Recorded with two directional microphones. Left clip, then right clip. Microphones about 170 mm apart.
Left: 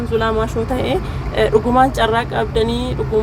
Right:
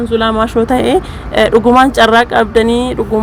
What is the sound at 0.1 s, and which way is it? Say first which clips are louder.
A woman's voice: right 5 dB; 30° right (ahead or behind).